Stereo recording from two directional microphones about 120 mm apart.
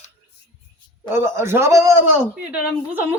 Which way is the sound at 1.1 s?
20° right (ahead or behind).